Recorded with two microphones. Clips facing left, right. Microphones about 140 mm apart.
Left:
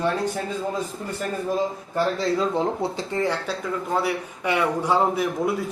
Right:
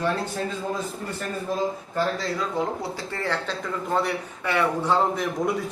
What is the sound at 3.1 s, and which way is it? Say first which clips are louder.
Speech: left 2 dB; 15° left (ahead or behind).